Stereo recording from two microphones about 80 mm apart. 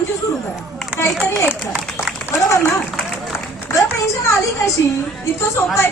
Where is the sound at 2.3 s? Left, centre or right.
Left.